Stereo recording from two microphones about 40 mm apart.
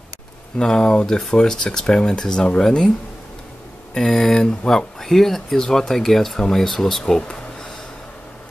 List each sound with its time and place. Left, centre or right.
0.6 s speech: centre
3.9 s speech: centre
5.0 s speech: centre